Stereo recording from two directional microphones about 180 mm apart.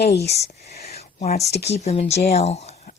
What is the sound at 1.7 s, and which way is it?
A woman's voice, 40° left (ahead or behind).